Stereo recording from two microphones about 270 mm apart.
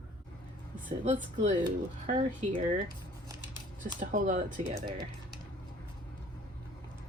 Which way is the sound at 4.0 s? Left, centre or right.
Right.